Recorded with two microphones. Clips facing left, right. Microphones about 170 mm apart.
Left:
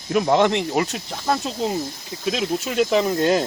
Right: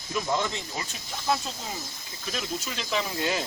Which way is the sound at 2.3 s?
65° left (ahead or behind).